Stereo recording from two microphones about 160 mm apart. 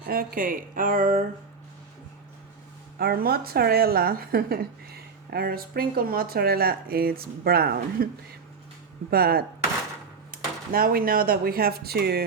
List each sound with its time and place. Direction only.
0.0 s speech: 70° right (ahead or behind)
3.0 s a woman's voice: 75° right (ahead or behind)